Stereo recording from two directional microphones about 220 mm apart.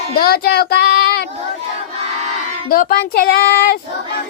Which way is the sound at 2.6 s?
40° left (ahead or behind).